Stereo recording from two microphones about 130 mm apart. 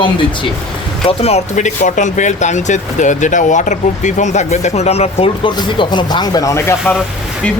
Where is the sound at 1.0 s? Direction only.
50° left (ahead or behind).